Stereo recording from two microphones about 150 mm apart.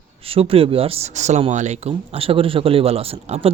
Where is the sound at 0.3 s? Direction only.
40° right (ahead or behind).